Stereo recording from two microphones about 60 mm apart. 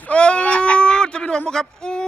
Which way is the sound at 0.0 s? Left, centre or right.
Centre.